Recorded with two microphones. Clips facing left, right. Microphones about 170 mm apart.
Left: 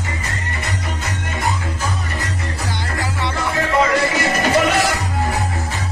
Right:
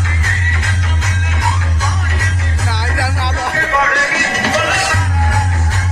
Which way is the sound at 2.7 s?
80° right.